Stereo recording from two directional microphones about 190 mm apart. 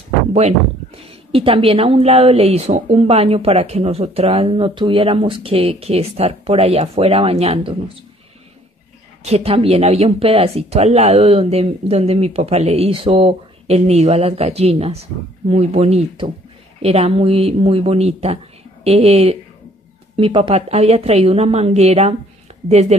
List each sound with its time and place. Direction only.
0.3 s speech: 35° right (ahead or behind)
9.2 s speech: 35° right (ahead or behind)